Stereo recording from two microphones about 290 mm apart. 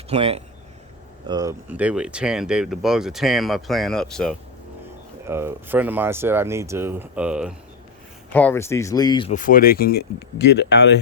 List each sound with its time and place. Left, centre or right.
0.1 s speech: right; by 10.9 s left